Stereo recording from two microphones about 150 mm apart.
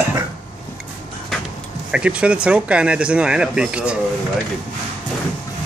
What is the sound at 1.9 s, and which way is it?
Speech, 5° right (ahead or behind).